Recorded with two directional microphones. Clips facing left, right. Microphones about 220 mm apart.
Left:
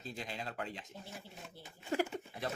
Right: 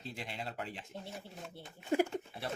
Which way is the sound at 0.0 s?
30° right (ahead or behind).